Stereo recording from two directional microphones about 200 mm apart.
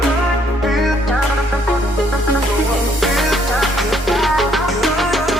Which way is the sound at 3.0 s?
Centre (ahead or behind).